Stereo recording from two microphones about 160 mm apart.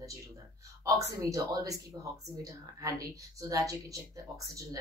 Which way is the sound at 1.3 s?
20° right (ahead or behind).